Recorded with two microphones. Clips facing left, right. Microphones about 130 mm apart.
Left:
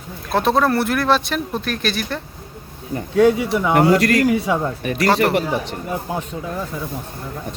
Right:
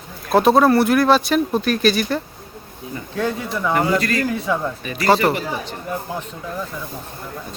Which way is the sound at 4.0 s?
75° left (ahead or behind).